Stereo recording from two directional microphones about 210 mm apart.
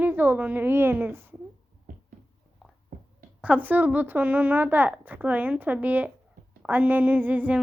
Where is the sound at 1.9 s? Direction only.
40° right (ahead or behind).